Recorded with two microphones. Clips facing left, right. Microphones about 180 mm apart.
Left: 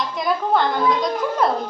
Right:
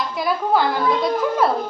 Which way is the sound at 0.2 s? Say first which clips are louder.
Even; 5° right (ahead or behind).